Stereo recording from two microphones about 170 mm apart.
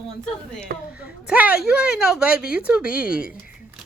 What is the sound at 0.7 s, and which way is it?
Speech, 55° right (ahead or behind).